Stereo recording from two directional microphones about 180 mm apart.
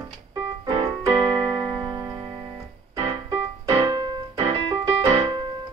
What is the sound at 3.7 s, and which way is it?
Keyboard, 25° right (ahead or behind).